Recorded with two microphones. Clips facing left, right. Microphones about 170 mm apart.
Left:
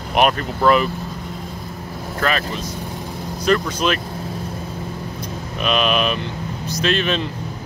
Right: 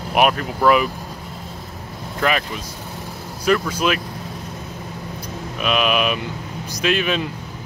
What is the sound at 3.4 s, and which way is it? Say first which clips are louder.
Speech: even; 10° right (ahead or behind).